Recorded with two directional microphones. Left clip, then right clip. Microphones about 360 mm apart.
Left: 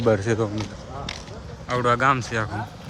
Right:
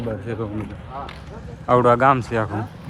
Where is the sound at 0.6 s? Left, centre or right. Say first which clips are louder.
Right 2 dB; left.